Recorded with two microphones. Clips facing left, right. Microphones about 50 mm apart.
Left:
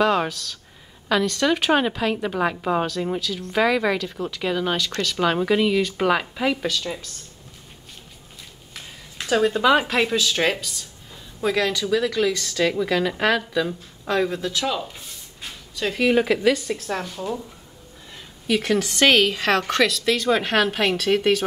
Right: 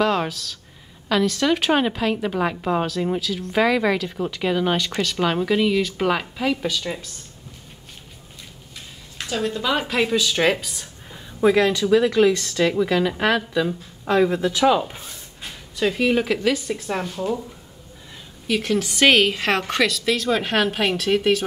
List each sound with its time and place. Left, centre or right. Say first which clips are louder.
0.0 s a woman's voice: left 1 dB; centre
5.1 s a woman's voice: left 1 dB; centre
6.7 s a woman's voice: right 1 dB; centre
9.3 s speech: left 6 dB; left
9.8 s a woman's voice: even; centre
15.7 s a woman's voice: even; centre
18.5 s a woman's voice: left 1 dB; centre